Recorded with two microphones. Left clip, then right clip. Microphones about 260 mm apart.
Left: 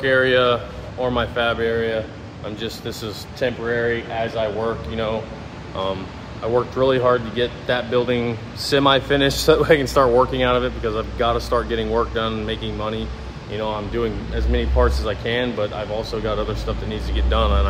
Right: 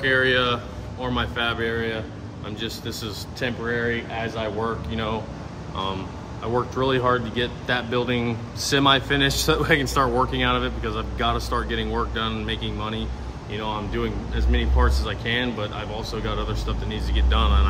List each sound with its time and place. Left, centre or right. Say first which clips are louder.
0.0 s speech: left 4 dB; centre
6.4 s speech: left 5 dB; centre